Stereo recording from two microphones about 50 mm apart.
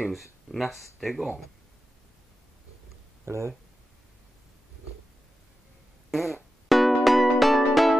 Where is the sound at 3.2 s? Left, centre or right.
Right.